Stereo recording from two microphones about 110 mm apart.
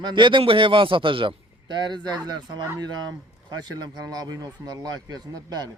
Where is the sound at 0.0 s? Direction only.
45° right (ahead or behind).